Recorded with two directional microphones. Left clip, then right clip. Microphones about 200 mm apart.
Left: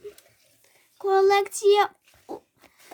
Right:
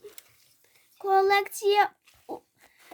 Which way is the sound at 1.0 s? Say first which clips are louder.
Left 2 dB; centre (ahead or behind).